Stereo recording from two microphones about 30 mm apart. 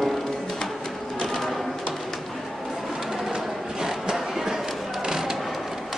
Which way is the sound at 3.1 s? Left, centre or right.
Right.